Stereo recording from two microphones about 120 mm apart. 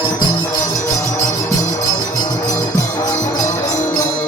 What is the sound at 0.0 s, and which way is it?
Music, 40° left (ahead or behind).